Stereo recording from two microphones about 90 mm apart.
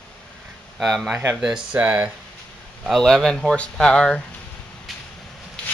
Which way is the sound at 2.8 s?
Centre (ahead or behind).